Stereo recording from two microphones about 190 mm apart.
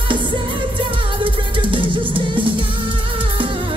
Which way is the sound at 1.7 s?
25° right (ahead or behind).